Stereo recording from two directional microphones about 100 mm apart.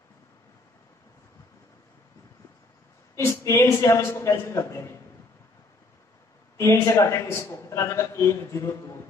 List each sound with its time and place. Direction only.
3.2 s a man's voice: 30° left (ahead or behind)
6.5 s a man's voice: 30° left (ahead or behind)